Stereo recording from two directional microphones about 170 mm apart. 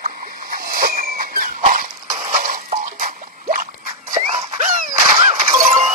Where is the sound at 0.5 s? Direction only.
60° right (ahead or behind).